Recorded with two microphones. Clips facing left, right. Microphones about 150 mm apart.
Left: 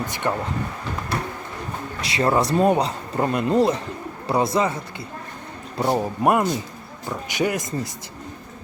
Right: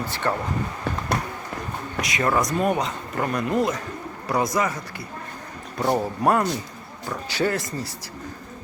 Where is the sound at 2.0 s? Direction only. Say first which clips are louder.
Left 3 dB; 30° left (ahead or behind).